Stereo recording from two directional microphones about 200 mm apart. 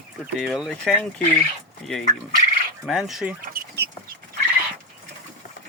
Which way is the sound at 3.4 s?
45° right (ahead or behind).